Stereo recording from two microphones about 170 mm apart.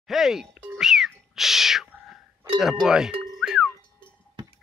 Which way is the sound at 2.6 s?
Centre (ahead or behind).